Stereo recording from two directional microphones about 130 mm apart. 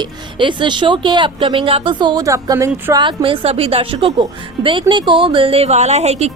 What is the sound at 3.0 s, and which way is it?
A woman's voice, 40° right (ahead or behind).